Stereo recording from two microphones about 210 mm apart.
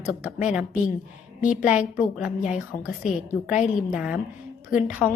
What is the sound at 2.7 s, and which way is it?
Speech, 40° left (ahead or behind).